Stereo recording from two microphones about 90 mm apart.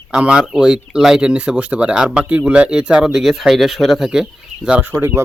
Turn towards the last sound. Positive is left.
turn(degrees=-20)  # may be behind; listen again after turning